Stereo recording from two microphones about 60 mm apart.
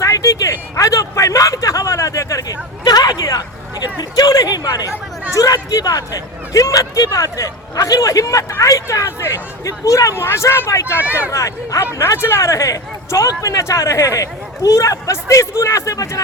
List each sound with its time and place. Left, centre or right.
0.0 s a sound: left
4.1 s chatter: left
5.3 s speech: left
10.2 s speech: left
10.7 s speech: left
11.9 s speech: left